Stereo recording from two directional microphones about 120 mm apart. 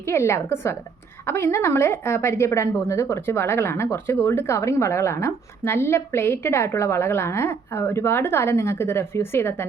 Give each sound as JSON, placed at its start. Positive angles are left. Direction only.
{"t": 0.1, "sound": "a woman's voice", "side_deg": 20}